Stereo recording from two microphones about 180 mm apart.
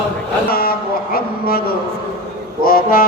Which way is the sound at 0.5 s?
55° left (ahead or behind).